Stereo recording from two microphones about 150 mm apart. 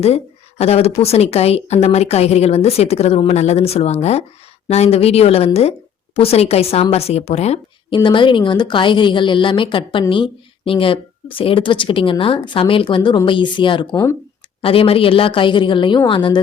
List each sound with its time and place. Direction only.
0.6 s a woman's voice: 45° left (ahead or behind)
7.9 s a woman's voice: 35° left (ahead or behind)
13.9 s speech: 20° left (ahead or behind)
14.6 s a woman's voice: 40° left (ahead or behind)